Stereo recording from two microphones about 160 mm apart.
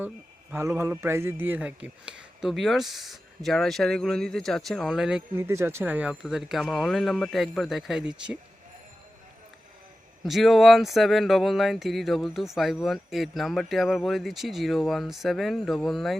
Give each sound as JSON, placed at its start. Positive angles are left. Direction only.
{"t": 0.5, "sound": "speech", "side_deg": -15}
{"t": 5.4, "sound": "speech", "side_deg": -15}
{"t": 10.2, "sound": "speech", "side_deg": 0}